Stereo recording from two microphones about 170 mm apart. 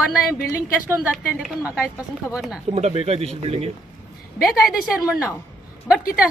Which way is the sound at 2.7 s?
35° right (ahead or behind).